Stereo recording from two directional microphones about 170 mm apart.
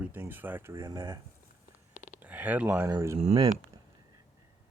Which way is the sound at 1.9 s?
45° left (ahead or behind).